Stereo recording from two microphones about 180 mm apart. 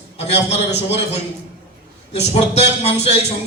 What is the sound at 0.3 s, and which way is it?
A man's voice, 35° left (ahead or behind).